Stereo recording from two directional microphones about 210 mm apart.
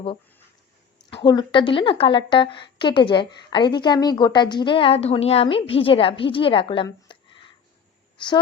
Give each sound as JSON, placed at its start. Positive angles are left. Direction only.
{"t": 1.2, "sound": "a woman's voice", "side_deg": 20}